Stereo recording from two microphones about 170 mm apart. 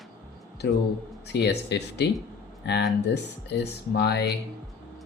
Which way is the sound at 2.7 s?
90° left.